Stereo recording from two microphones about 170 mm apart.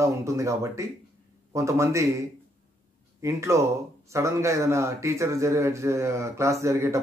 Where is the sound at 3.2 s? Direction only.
15° right (ahead or behind).